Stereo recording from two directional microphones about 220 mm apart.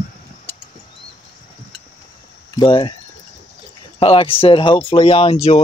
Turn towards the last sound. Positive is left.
turn(degrees=25)  # may be behind; listen again after turning